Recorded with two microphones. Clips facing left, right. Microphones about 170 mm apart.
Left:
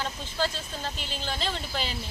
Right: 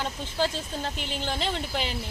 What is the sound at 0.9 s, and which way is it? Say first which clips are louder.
Speech: right 4 dB; 65° right (ahead or behind).